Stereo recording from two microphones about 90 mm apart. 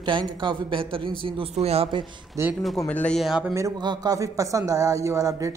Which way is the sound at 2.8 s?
15° left (ahead or behind).